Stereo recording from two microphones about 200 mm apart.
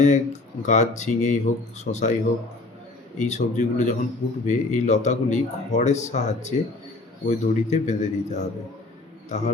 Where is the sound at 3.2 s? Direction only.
35° left (ahead or behind).